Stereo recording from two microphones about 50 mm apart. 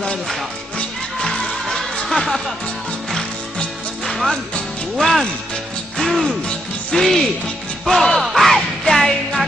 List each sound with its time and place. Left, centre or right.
1.2 s music: centre
4.0 s music: centre
4.9 s speech: centre
5.9 s music: centre
6.9 s speech: centre
7.9 s music: centre
8.4 s music: centre